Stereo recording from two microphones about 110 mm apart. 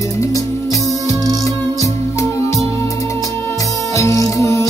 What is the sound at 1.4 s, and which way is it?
Music, 30° left (ahead or behind).